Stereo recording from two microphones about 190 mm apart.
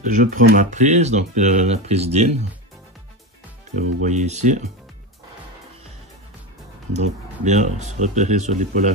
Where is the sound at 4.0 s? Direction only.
35° right (ahead or behind).